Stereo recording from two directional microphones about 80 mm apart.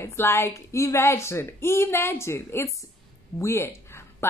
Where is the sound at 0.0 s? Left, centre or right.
Left.